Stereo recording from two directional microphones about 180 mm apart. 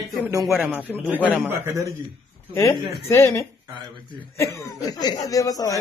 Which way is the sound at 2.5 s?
15° left (ahead or behind).